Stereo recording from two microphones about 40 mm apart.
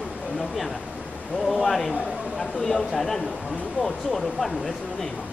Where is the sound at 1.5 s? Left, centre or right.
Centre.